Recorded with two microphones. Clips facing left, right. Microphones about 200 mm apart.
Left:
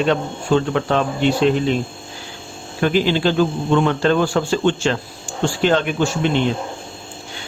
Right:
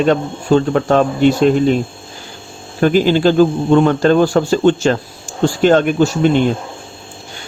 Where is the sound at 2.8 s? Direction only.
45° right (ahead or behind).